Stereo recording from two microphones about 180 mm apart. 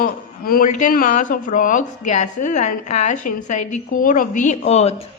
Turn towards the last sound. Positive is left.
turn(degrees=40)  # may be behind; listen again after turning